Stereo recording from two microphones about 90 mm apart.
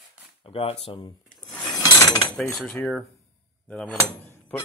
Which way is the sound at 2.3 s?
5° left (ahead or behind).